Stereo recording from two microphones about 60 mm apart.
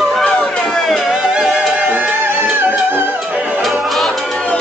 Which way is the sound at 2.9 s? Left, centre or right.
Right.